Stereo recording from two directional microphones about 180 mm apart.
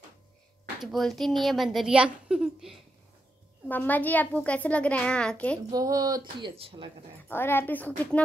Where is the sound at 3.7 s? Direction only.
10° left (ahead or behind).